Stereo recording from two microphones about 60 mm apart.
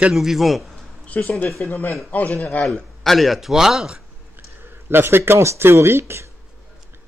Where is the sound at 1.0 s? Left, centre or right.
Left.